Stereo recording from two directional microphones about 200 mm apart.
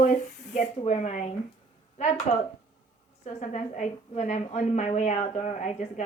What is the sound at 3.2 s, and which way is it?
A woman's voice, 35° left (ahead or behind).